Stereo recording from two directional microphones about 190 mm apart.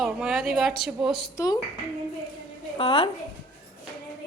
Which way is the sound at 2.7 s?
30° left (ahead or behind).